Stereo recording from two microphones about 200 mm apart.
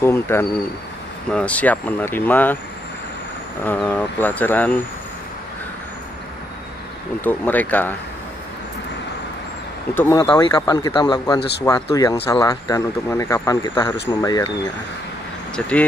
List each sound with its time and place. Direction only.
0.0 s speech: 10° left (ahead or behind)
3.6 s speech: 10° left (ahead or behind)
7.2 s speech: 10° left (ahead or behind)
9.9 s speech: 50° left (ahead or behind)
10.3 s speech: 25° left (ahead or behind)
15.5 s speech: 5° left (ahead or behind)